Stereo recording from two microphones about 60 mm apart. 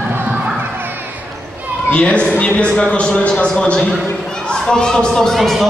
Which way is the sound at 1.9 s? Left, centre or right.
Centre.